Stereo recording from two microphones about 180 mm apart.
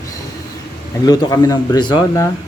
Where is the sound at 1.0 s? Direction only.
20° left (ahead or behind).